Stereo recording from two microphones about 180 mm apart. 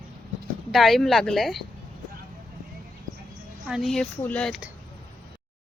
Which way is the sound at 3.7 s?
Centre (ahead or behind).